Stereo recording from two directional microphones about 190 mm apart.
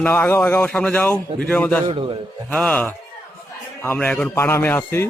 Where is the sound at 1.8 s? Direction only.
30° right (ahead or behind).